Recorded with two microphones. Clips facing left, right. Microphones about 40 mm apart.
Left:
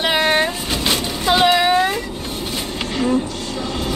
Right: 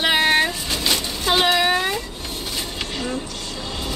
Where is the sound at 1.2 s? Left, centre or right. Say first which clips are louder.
Left 4 dB; centre.